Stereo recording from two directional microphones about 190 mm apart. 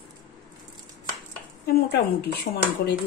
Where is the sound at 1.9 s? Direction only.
60° left (ahead or behind).